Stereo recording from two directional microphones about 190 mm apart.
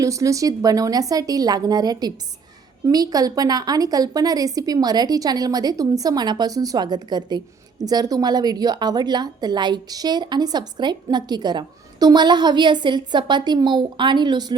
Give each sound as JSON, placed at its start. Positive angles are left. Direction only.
{"t": 0.0, "sound": "a woman's voice", "side_deg": -15}